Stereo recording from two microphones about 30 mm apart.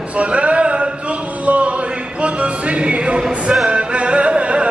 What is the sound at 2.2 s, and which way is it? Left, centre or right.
Music, right.